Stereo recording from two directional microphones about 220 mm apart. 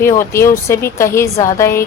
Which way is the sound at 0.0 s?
10° left (ahead or behind).